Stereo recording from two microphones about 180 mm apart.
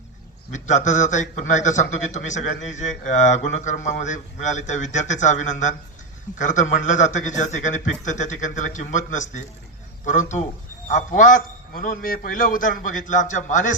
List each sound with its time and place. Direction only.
0.5 s a man's voice: 45° left (ahead or behind)